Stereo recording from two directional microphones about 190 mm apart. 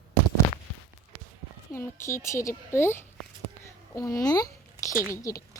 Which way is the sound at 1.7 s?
10° left (ahead or behind).